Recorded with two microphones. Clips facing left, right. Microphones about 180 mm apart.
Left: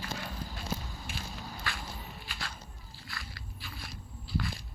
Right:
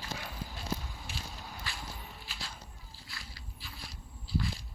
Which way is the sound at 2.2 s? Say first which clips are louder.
Left 4 dB; 55° left (ahead or behind).